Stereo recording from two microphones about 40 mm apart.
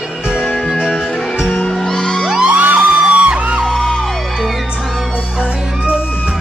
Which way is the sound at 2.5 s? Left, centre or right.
Right.